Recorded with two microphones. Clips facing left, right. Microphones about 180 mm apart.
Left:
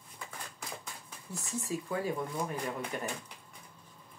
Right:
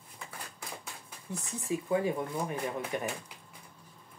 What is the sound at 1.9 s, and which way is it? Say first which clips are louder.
Speech: right 6 dB; 20° right (ahead or behind).